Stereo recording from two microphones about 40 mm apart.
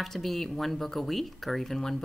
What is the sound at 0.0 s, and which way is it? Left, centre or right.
Speech, centre.